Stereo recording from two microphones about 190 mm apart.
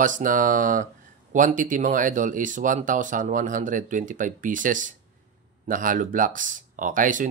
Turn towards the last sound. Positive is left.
turn(degrees=-45)  # may be behind; listen again after turning